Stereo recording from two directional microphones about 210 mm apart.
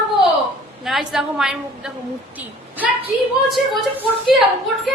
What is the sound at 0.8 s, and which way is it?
A woman's voice, centre (ahead or behind).